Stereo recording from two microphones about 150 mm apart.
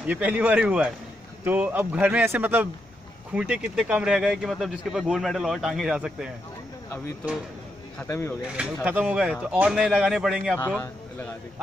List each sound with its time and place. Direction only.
0.0 s speech: 10° right (ahead or behind)
8.1 s speech: 15° left (ahead or behind)
8.8 s speech: 10° right (ahead or behind)
10.8 s speech: 15° left (ahead or behind)